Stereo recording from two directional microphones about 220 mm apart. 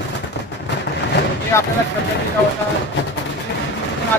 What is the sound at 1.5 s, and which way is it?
Speech, 10° left (ahead or behind).